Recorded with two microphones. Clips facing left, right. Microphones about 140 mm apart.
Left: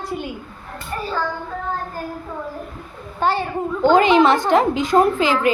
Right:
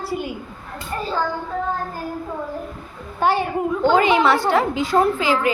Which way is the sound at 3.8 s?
15° left (ahead or behind).